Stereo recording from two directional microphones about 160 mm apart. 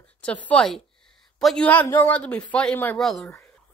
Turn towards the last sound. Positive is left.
turn(degrees=5)  # may be behind; listen again after turning